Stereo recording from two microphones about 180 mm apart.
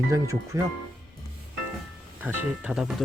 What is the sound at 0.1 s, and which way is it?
Speech, 15° right (ahead or behind).